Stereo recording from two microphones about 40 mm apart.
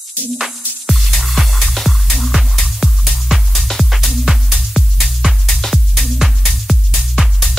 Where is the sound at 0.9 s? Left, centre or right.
Centre.